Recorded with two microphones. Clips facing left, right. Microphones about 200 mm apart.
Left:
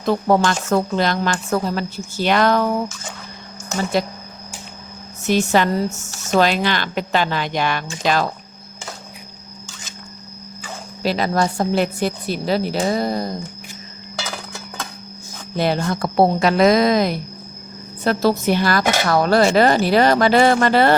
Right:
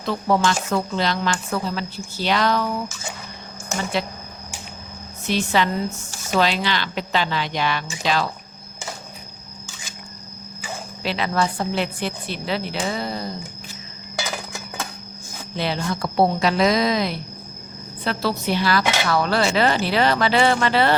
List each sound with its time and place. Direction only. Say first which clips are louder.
0.0 s speech: left 4 dB; 45° left (ahead or behind)
5.2 s speech: left 4 dB; 45° left (ahead or behind)
11.0 s a woman's voice: left 4 dB; 40° left (ahead or behind)
14.2 s a sound: right 1 dB; 10° right (ahead or behind)
15.5 s speech: left 5 dB; 45° left (ahead or behind)